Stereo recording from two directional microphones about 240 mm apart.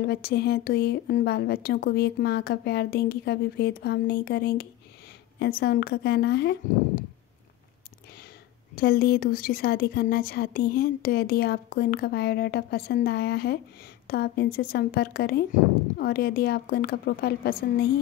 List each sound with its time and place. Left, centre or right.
0.0 s a woman's voice: left
8.7 s a woman's voice: left